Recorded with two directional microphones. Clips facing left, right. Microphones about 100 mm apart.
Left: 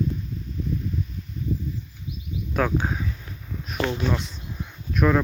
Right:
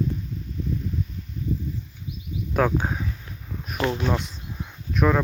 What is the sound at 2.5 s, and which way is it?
Speech, 15° right (ahead or behind).